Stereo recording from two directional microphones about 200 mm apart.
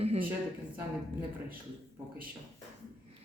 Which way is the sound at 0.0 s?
30° right (ahead or behind).